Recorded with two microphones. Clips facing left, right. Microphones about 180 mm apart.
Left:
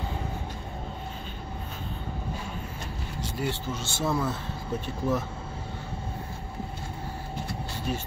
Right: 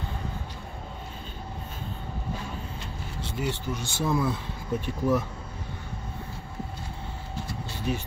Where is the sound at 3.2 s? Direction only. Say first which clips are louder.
Even; 15° right (ahead or behind).